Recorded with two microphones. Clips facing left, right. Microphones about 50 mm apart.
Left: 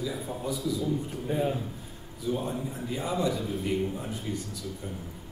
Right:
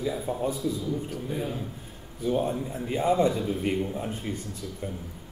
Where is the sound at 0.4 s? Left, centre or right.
Right.